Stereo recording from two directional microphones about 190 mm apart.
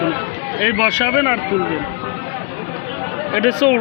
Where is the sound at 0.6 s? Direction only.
10° right (ahead or behind).